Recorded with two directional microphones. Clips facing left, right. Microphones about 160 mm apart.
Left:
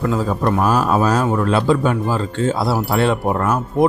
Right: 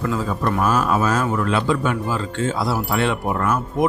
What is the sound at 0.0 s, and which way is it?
Speech, 35° left (ahead or behind).